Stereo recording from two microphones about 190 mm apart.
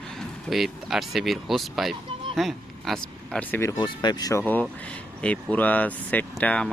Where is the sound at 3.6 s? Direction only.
20° left (ahead or behind).